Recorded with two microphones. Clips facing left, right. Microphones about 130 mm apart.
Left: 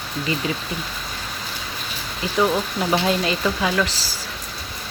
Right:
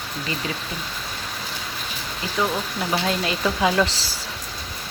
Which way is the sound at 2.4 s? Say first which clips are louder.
Left 4 dB; 20° left (ahead or behind).